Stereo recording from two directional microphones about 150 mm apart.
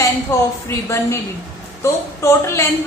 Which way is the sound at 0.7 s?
20° left (ahead or behind).